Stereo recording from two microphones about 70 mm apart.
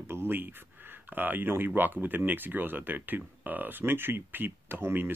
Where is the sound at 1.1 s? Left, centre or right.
Right.